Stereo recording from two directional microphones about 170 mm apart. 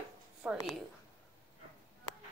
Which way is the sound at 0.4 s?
5° right (ahead or behind).